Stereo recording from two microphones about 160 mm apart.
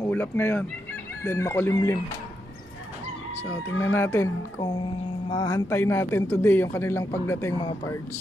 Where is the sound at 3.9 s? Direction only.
15° left (ahead or behind).